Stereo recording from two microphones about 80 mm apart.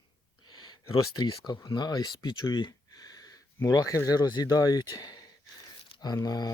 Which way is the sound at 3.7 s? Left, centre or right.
Left.